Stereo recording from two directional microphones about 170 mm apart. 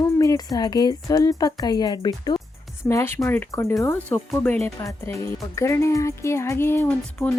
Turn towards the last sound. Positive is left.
turn(degrees=10)  # may be behind; listen again after turning